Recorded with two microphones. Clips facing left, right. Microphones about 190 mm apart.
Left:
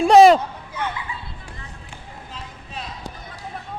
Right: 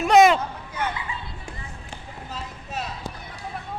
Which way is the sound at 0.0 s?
30° left (ahead or behind).